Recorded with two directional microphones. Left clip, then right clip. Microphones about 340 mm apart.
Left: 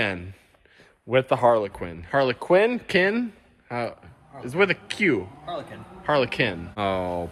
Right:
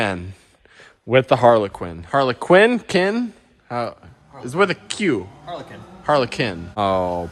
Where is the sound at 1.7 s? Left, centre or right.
Centre.